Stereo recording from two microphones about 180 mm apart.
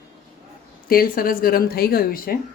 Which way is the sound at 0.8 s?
55° left (ahead or behind).